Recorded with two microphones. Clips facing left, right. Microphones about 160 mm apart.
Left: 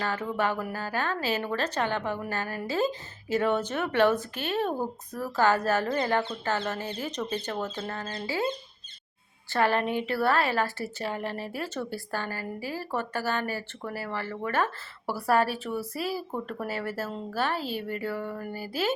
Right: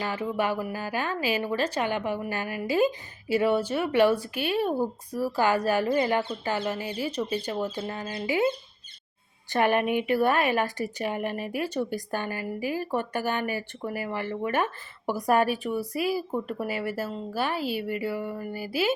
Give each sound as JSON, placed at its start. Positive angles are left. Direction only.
{"t": 0.0, "sound": "a woman's voice", "side_deg": -10}